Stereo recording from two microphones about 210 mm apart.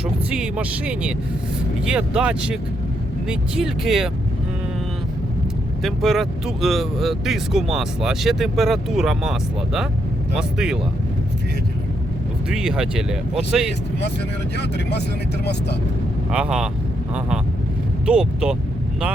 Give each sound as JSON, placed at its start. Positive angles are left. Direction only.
{"t": 0.0, "sound": "speech", "side_deg": -5}
{"t": 5.8, "sound": "speech", "side_deg": 0}
{"t": 12.5, "sound": "speech", "side_deg": -5}
{"t": 14.5, "sound": "speech", "side_deg": 50}
{"t": 16.3, "sound": "speech", "side_deg": -5}